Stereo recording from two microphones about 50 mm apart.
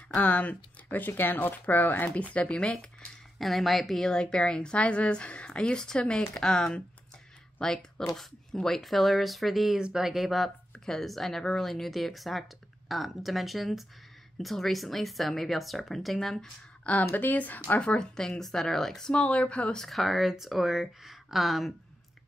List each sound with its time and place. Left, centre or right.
0.1 s speech: left
2.0 s speech: left
3.3 s speech: centre
4.1 s speech: centre
9.8 s speech: centre
10.0 s speech: centre
10.7 s a sound: centre
11.1 s speech: centre
17.1 s speech: left
17.7 s speech: centre
19.1 s speech: left
19.8 s speech: centre